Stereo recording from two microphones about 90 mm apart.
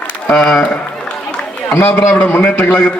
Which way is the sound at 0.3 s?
10° left (ahead or behind).